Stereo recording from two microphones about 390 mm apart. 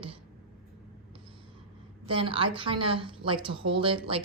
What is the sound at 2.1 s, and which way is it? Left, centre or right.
A woman's voice, centre.